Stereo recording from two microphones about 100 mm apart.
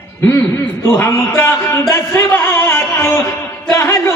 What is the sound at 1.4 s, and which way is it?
Speech, 25° left (ahead or behind).